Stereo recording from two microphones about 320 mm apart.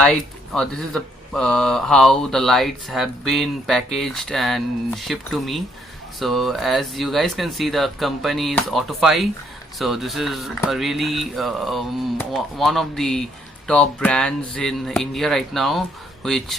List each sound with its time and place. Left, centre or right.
0.0 s speech: centre